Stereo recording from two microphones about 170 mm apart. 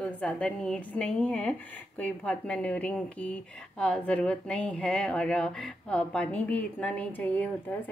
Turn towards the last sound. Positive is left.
turn(degrees=10)  # may be behind; listen again after turning